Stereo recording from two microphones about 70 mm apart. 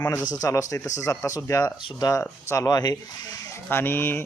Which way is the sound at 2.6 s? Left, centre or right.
Left.